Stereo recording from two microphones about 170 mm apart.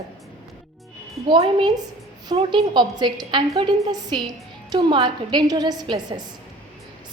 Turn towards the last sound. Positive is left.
turn(degrees=-25)  # may be behind; listen again after turning